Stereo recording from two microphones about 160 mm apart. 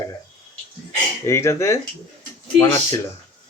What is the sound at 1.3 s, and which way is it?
Speech, 15° left (ahead or behind).